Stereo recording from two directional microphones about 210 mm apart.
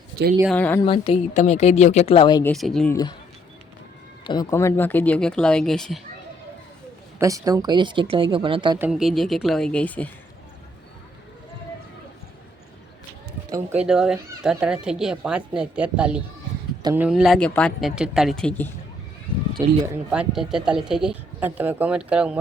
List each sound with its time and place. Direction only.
0.4 s speech: 5° left (ahead or behind)
0.8 s a woman's voice: 25° left (ahead or behind)
2.4 s speech: centre (ahead or behind)
2.9 s speech: 20° left (ahead or behind)
4.2 s speech: 20° left (ahead or behind); by 6.0 s centre (ahead or behind)
7.2 s speech: 15° right (ahead or behind)
8.8 s speech: centre (ahead or behind)
13.5 s speech: 10° right (ahead or behind)
19.6 s speech: 15° right (ahead or behind)